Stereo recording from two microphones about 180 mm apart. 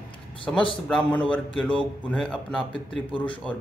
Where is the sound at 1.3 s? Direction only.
5° left (ahead or behind).